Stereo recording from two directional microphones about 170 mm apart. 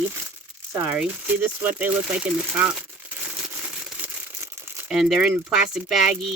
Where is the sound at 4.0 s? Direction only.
15° right (ahead or behind).